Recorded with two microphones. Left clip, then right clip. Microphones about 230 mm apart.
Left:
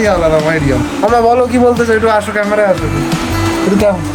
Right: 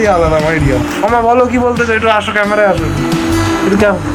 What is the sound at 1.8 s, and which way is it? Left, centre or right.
Speech, left.